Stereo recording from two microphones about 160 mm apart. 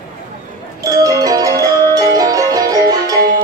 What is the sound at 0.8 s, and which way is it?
Music, 25° right (ahead or behind).